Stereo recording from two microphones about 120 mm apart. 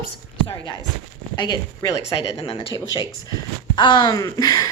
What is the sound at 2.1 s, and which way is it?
Speech, 50° left (ahead or behind).